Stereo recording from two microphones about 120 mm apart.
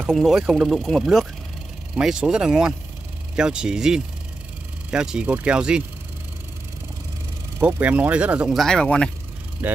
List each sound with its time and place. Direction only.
0.0 s speech: 5° right (ahead or behind)
7.6 s speech: 10° right (ahead or behind)
8.5 s speech: 5° left (ahead or behind)
9.6 s speech: 15° right (ahead or behind)